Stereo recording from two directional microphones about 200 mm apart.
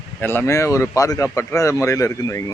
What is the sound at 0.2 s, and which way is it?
Speech, 10° left (ahead or behind).